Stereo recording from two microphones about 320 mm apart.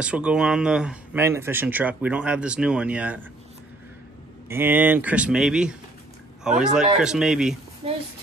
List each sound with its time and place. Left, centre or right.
0.0 s speech: centre
4.5 s speech: centre
7.8 s speech: centre